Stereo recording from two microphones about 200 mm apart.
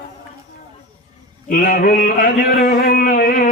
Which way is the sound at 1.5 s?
45° left (ahead or behind).